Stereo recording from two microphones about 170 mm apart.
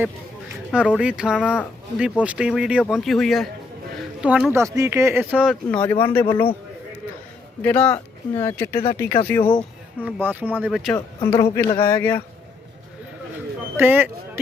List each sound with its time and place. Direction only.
0.7 s speech: 5° right (ahead or behind)
4.5 s speech: 20° right (ahead or behind)
5.7 s speech: 10° left (ahead or behind)
7.6 s speech: 10° left (ahead or behind)
9.4 s speech: 30° left (ahead or behind)
10.2 s speech: 10° right (ahead or behind)
10.9 s speech: 15° left (ahead or behind)
13.7 s speech: 10° right (ahead or behind)